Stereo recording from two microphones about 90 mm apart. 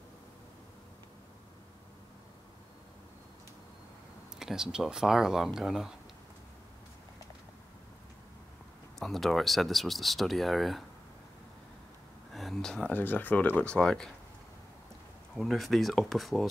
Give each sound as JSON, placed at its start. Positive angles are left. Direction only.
{"t": 4.4, "sound": "speech", "side_deg": -5}
{"t": 9.0, "sound": "speech", "side_deg": 0}
{"t": 12.3, "sound": "a sound", "side_deg": 0}
{"t": 12.9, "sound": "speech", "side_deg": 20}
{"t": 15.3, "sound": "speech", "side_deg": 0}